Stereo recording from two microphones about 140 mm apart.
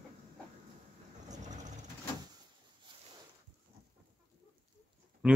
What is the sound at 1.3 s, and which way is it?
Vehicle, 60° right (ahead or behind).